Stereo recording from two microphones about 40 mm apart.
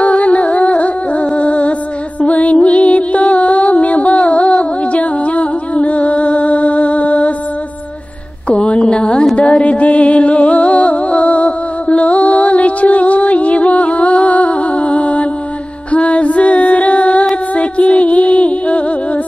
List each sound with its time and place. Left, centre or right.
0.0 s music: left
8.5 s a sound: left
9.4 s music: left
15.9 s female singing: left
17.6 s music: left